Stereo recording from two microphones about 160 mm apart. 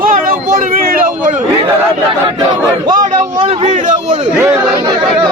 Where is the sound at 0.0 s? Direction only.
60° right (ahead or behind).